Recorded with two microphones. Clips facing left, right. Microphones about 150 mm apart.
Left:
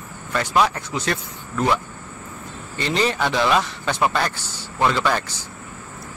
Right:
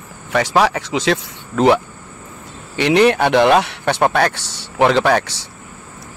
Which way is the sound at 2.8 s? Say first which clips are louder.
Right 9 dB; 70° right (ahead or behind).